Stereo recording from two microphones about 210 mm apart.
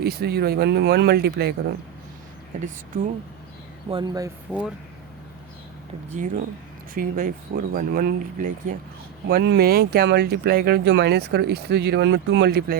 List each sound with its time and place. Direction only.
0.0 s speech: 50° right (ahead or behind)
3.8 s speech: 20° right (ahead or behind)
4.5 s speech: 5° right (ahead or behind)
6.1 s speech: 40° right (ahead or behind)
9.2 s speech: 50° right (ahead or behind)